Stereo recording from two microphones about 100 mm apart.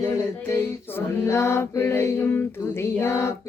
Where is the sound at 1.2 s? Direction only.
25° left (ahead or behind).